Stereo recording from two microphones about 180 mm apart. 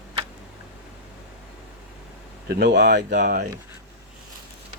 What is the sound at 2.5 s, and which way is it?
Speech, 65° right (ahead or behind).